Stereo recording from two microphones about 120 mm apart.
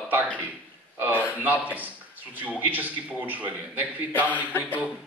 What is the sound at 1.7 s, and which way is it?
A man's voice, 15° right (ahead or behind).